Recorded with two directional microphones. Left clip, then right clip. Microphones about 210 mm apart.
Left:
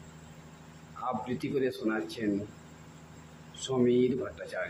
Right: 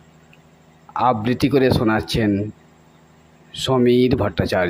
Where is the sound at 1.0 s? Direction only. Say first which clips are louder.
Right 16 dB; 40° right (ahead or behind).